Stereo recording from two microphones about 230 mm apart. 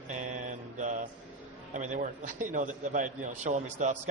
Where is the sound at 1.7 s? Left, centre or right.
Right.